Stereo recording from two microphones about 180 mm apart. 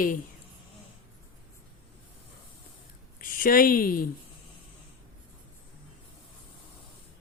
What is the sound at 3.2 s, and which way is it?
Speech, 50° left (ahead or behind).